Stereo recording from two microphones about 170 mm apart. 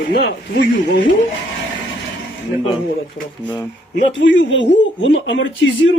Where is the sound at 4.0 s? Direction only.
90° left.